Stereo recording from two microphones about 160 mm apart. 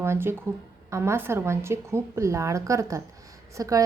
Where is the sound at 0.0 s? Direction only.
15° right (ahead or behind).